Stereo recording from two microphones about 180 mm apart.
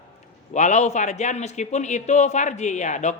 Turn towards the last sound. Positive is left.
turn(degrees=40)  # may be behind; listen again after turning